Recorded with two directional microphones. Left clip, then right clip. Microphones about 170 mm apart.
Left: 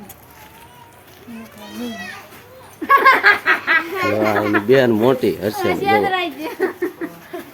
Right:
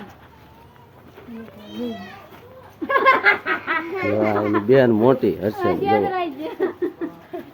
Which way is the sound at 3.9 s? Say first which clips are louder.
Left 3 dB; 10° left (ahead or behind).